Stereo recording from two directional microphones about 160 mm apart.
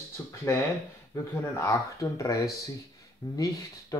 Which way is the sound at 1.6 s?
20° left (ahead or behind).